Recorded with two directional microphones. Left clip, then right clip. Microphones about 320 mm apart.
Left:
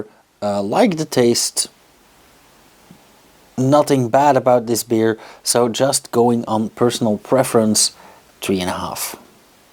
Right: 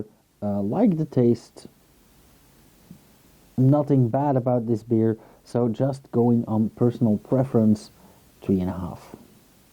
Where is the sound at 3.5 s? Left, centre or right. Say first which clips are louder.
Left 6 dB; centre.